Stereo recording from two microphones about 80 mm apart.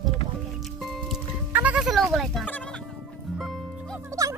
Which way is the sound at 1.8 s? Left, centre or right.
Centre.